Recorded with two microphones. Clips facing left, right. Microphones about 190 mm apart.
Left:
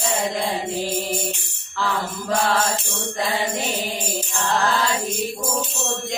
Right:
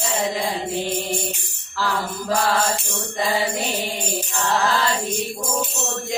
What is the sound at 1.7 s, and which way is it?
Music, centre (ahead or behind).